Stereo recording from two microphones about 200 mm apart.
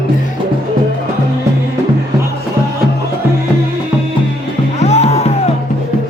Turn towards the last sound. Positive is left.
turn(degrees=30)  # may be behind; listen again after turning